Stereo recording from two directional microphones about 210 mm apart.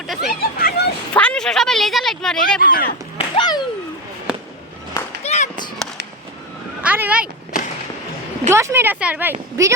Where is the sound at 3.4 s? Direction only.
20° left (ahead or behind).